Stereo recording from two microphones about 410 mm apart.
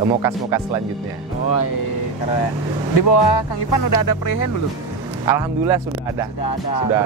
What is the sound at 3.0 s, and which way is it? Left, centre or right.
Music, left.